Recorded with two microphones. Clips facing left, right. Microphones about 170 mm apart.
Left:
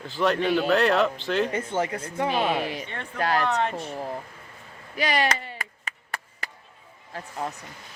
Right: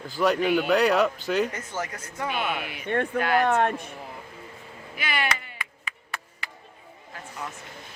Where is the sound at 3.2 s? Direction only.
35° left (ahead or behind).